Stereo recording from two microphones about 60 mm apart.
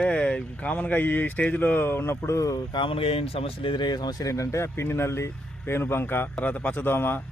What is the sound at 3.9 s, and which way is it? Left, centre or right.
Speech, left.